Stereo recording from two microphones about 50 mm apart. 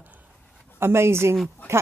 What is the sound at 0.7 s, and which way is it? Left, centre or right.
Speech, right.